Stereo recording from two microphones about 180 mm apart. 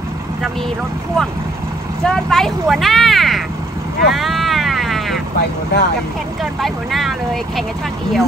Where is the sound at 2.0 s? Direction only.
Centre (ahead or behind).